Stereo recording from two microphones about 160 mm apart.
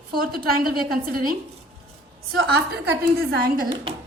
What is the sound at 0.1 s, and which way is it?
A woman's voice, 70° right (ahead or behind).